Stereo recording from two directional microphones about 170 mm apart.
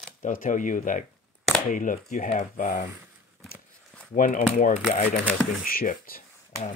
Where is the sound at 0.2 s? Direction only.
50° left (ahead or behind).